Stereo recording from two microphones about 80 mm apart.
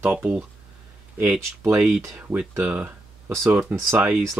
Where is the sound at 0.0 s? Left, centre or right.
Centre.